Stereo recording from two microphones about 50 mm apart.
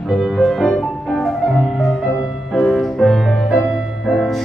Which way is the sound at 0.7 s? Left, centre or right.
Centre.